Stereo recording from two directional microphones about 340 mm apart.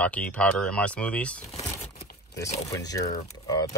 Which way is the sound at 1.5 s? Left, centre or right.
Centre.